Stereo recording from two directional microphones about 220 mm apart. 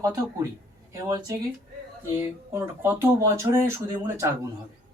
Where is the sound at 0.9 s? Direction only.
15° right (ahead or behind).